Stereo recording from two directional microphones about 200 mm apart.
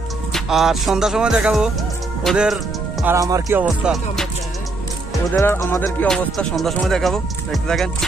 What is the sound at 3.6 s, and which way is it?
Music, centre (ahead or behind).